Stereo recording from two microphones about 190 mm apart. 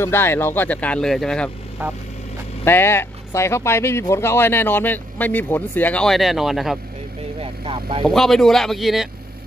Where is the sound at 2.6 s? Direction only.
10° left (ahead or behind).